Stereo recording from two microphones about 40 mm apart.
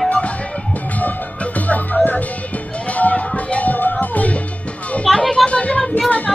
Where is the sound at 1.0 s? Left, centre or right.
Left.